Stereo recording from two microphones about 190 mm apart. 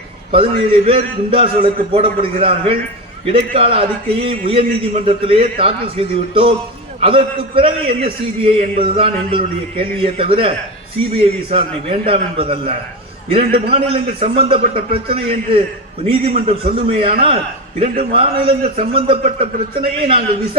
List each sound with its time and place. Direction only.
0.3 s a man's voice: 30° right (ahead or behind)